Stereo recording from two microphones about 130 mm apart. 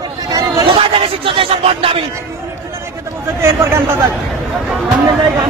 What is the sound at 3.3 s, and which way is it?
Speech, 20° right (ahead or behind).